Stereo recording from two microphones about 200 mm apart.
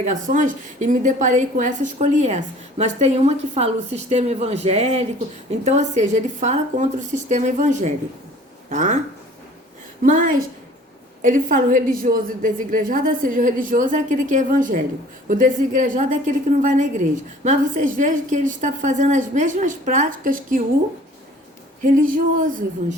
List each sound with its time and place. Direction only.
0.0 s a woman's voice: 40° right (ahead or behind)
10.0 s a woman's voice: 40° right (ahead or behind)
21.8 s a woman's voice: 40° right (ahead or behind)